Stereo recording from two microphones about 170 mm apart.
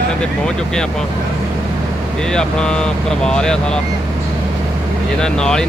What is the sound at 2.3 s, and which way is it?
Speech, 5° left (ahead or behind).